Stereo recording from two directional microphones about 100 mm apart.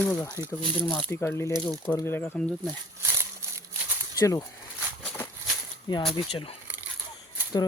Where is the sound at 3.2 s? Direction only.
25° right (ahead or behind).